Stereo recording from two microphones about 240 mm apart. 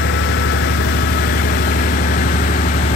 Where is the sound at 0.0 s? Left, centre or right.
Left.